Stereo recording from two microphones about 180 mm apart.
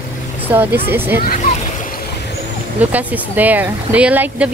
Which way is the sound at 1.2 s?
50° left (ahead or behind).